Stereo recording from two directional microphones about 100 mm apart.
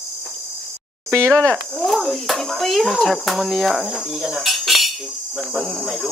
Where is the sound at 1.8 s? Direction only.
Centre (ahead or behind).